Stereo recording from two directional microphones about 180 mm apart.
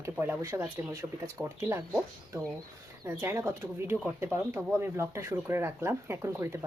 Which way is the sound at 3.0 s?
15° right (ahead or behind).